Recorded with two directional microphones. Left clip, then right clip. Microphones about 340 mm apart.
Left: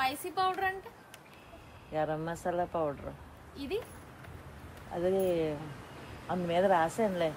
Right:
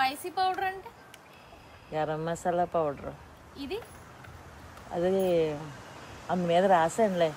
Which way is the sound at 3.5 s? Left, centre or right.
Centre.